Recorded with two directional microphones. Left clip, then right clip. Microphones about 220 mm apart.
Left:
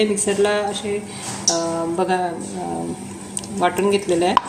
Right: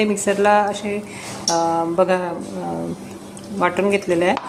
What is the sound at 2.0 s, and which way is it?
Speech, 15° right (ahead or behind).